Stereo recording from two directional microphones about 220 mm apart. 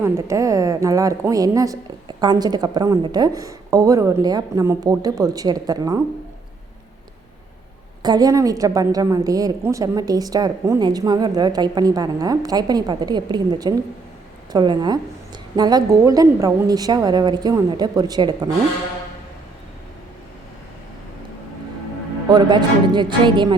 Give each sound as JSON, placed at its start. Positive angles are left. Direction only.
{"t": 0.0, "sound": "a woman's voice", "side_deg": -15}
{"t": 8.0, "sound": "a woman's voice", "side_deg": -20}
{"t": 22.3, "sound": "a woman's voice", "side_deg": -20}